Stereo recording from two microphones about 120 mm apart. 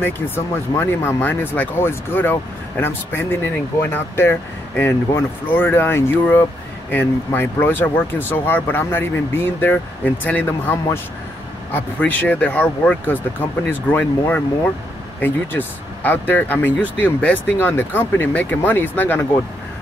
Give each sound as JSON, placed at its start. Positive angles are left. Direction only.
{"t": 0.7, "sound": "speech", "side_deg": 20}